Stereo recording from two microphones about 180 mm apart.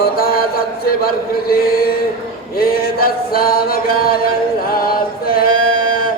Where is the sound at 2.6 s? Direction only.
55° left (ahead or behind).